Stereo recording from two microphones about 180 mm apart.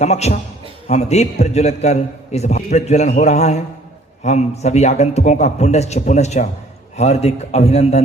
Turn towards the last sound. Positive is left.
turn(degrees=35)  # may be behind; listen again after turning